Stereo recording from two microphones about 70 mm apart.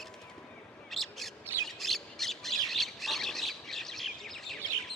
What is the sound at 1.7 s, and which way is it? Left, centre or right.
Squawk, centre.